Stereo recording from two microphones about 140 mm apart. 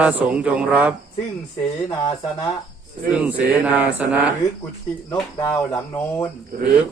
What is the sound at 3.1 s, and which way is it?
A man's voice, 10° right (ahead or behind).